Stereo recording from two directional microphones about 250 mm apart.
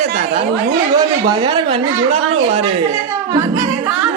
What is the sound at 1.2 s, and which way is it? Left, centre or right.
Speech, centre.